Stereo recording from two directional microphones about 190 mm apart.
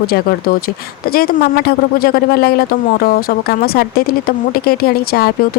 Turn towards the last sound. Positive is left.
turn(degrees=55)  # may be behind; listen again after turning